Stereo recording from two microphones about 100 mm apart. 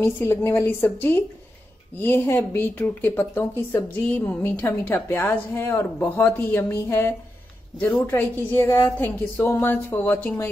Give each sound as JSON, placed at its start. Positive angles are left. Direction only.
{"t": 0.0, "sound": "speech", "side_deg": 25}